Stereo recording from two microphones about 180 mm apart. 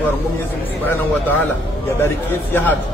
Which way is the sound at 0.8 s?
10° left (ahead or behind).